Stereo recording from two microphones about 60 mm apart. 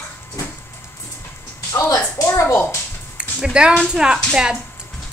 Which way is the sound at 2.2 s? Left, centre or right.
Left.